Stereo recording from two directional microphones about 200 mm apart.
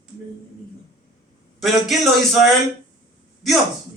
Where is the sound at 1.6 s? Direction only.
Centre (ahead or behind).